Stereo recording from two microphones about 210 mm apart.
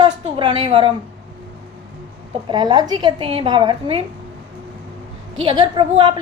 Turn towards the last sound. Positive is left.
turn(degrees=-20)  # may be behind; listen again after turning